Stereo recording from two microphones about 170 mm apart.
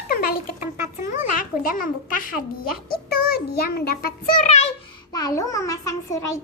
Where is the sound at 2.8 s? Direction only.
70° left (ahead or behind); by 4.7 s 40° left (ahead or behind).